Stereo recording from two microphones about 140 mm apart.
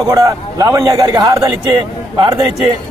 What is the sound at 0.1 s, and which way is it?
A man's voice, 25° right (ahead or behind).